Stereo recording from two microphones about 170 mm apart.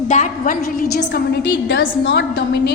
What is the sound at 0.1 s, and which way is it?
A woman's voice, 50° left (ahead or behind).